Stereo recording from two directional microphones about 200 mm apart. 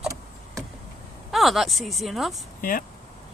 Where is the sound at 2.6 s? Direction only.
45° left (ahead or behind).